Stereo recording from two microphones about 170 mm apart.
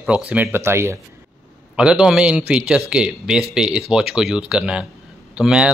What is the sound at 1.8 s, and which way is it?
A man's voice, 5° right (ahead or behind).